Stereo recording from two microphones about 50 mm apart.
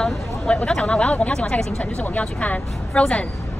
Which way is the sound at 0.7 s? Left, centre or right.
Left.